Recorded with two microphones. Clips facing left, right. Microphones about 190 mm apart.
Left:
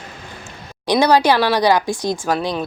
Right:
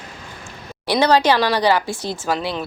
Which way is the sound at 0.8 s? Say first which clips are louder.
Left 2 dB; 15° left (ahead or behind).